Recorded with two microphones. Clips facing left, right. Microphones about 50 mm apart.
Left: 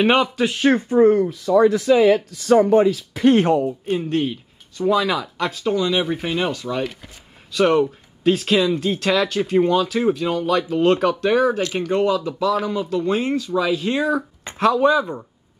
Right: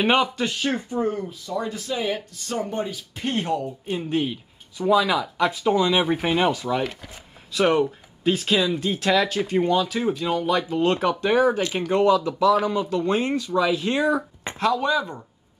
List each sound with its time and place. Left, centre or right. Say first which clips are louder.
0.0 s speech: left 3 dB; centre
0.6 s speech: left 13 dB; left
1.5 s speech: left 14 dB; left
3.9 s speech: left 2 dB; centre
5.5 s speech: left 2 dB; centre
12.0 s speech: right 3 dB; centre
14.6 s speech: left 6 dB; centre